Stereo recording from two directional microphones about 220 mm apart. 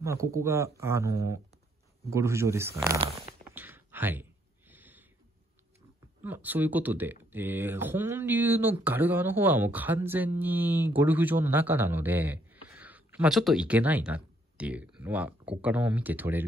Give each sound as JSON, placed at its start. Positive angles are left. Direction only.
{"t": 0.0, "sound": "speech", "side_deg": -15}
{"t": 3.5, "sound": "a sound", "side_deg": -10}
{"t": 6.2, "sound": "speech", "side_deg": -10}